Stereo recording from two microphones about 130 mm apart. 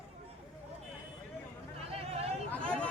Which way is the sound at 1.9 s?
50° right (ahead or behind).